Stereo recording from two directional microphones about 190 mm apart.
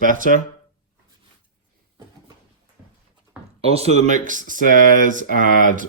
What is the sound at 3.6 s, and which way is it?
Speech, 30° right (ahead or behind).